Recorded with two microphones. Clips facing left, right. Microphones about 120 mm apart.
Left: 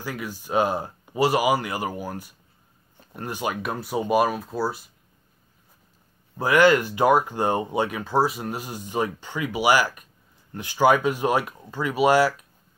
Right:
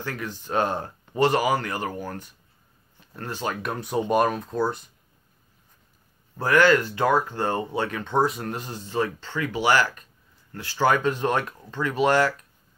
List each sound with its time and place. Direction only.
0.0 s speech: 10° left (ahead or behind)
3.6 s speech: 5° left (ahead or behind)
6.3 s speech: 15° left (ahead or behind)